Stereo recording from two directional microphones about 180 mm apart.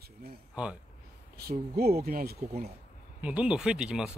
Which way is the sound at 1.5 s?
55° right (ahead or behind).